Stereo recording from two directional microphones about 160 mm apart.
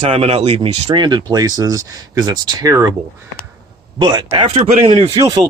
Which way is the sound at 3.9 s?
30° right (ahead or behind).